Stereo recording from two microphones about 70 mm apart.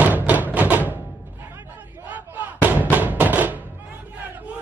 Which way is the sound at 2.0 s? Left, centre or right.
Right.